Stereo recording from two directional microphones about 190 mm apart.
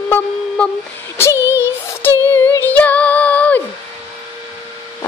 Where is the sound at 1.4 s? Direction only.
10° right (ahead or behind).